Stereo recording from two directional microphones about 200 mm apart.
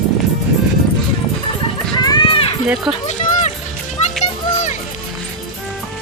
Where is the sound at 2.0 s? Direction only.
25° left (ahead or behind).